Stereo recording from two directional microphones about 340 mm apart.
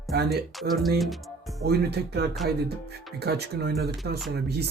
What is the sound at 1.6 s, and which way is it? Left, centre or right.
Speech, right.